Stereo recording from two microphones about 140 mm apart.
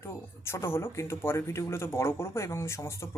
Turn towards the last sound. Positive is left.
turn(degrees=20)  # may be behind; listen again after turning